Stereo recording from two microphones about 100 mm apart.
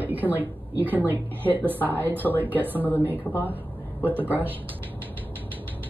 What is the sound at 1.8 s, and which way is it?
Speech, 20° left (ahead or behind).